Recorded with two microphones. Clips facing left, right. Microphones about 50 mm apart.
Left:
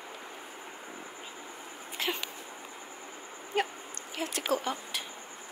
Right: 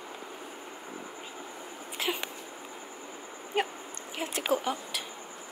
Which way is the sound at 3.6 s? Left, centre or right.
Centre.